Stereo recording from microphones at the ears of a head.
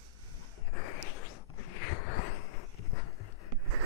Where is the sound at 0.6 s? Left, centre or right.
Left.